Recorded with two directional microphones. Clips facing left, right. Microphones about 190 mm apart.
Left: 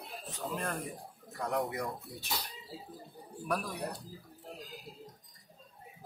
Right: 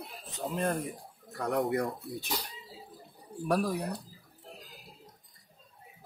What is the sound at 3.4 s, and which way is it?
Speech, 35° right (ahead or behind).